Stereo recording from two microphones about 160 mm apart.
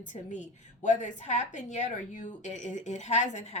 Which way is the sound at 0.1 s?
50° left (ahead or behind).